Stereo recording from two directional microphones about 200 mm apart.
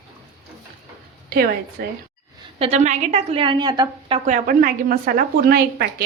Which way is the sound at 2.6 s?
35° right (ahead or behind).